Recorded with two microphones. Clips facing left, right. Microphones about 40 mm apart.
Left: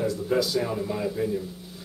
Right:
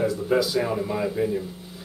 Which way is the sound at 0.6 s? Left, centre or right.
Centre.